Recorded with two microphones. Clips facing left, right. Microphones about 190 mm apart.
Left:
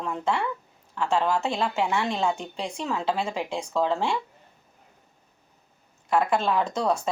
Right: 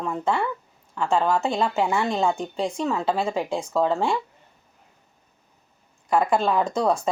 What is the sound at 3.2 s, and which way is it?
Speech, 35° right (ahead or behind).